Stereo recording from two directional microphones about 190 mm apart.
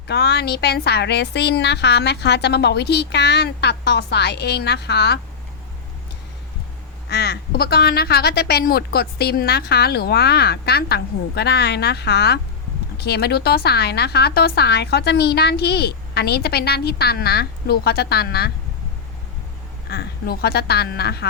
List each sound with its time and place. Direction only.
0.1 s a woman's voice: 60° left (ahead or behind)
7.1 s a woman's voice: 60° left (ahead or behind)
19.9 s a woman's voice: 55° left (ahead or behind)